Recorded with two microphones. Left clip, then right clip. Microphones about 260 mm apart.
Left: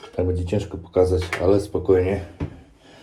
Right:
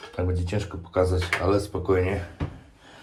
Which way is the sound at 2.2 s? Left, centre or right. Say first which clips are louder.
Left 2 dB; centre.